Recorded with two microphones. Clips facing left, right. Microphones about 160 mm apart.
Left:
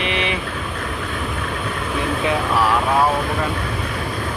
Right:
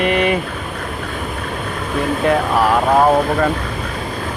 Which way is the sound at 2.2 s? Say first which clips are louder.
Right 4 dB; 45° right (ahead or behind).